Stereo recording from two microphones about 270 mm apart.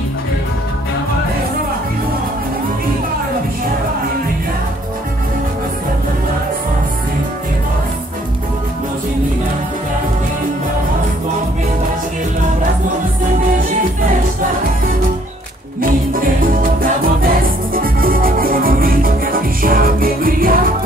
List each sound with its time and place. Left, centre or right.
16.8 s music: right